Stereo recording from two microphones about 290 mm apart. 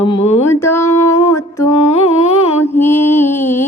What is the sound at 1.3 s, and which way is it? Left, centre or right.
Music, centre.